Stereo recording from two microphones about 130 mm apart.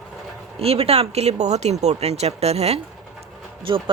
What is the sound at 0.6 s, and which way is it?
Speech, 50° right (ahead or behind).